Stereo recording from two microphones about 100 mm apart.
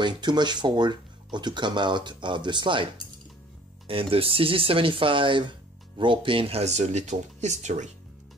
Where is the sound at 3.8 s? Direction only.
65° right (ahead or behind).